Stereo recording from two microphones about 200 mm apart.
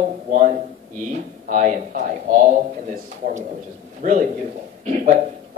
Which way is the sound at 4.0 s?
40° right (ahead or behind).